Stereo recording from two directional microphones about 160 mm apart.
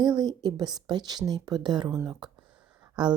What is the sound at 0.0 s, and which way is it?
Speech, 25° right (ahead or behind).